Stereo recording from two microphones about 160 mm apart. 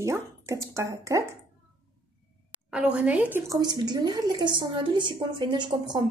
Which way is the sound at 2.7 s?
10° right (ahead or behind).